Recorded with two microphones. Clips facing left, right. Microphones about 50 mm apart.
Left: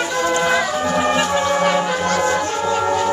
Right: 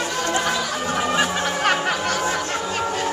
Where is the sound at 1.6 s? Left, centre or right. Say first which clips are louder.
Left 3 dB; right.